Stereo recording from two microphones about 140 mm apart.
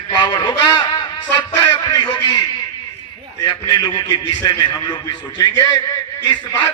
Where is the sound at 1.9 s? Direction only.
35° left (ahead or behind).